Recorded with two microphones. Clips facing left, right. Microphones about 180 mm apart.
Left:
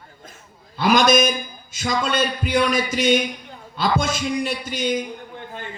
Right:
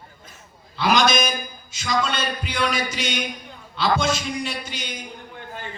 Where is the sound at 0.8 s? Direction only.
50° left (ahead or behind).